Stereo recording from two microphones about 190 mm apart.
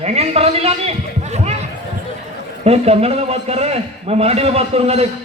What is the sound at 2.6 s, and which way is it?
A man's voice, 35° right (ahead or behind).